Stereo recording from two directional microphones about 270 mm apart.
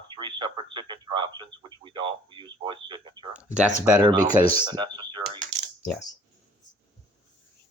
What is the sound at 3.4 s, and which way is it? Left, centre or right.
Speech, centre.